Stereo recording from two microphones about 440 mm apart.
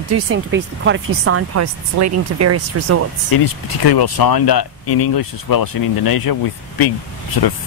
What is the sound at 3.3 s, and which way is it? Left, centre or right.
Speech, left.